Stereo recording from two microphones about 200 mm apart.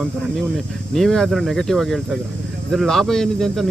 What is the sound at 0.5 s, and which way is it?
Speech, centre (ahead or behind).